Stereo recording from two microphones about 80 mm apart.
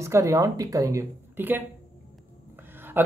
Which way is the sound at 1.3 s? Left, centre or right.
Right.